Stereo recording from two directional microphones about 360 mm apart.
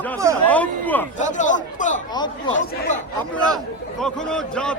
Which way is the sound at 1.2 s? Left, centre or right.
Left.